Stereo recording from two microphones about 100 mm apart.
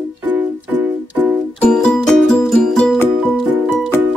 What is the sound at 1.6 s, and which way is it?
Music, 10° left (ahead or behind).